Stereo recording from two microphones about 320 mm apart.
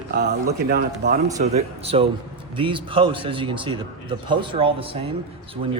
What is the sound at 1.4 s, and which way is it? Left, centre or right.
A man's voice, centre.